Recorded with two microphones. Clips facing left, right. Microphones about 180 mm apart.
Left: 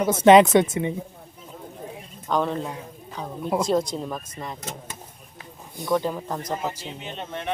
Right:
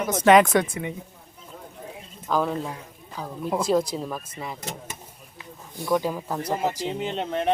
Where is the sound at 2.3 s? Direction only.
Centre (ahead or behind).